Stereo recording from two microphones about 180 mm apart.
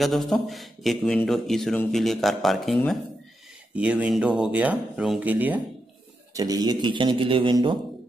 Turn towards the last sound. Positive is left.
turn(degrees=-25)  # may be behind; listen again after turning